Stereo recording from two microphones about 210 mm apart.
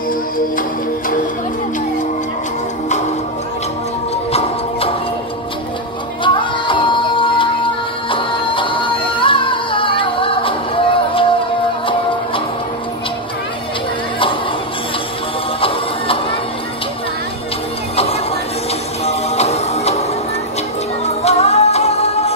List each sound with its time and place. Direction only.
0.6 s music: 40° left (ahead or behind)
4.3 s music: 30° left (ahead or behind)
6.2 s music: 25° left (ahead or behind)
19.0 s music: 30° left (ahead or behind)